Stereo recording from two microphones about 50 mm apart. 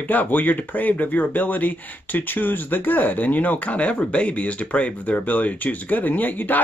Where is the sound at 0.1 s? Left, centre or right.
Left.